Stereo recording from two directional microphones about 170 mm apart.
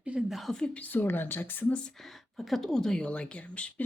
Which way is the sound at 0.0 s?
5° right (ahead or behind).